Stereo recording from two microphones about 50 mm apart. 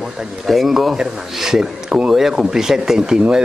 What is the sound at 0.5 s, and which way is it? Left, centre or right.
A man's voice, centre.